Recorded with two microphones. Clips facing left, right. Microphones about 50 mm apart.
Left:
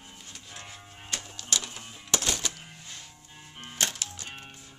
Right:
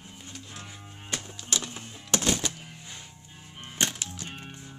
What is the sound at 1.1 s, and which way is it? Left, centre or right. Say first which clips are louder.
Music: right 1 dB; centre.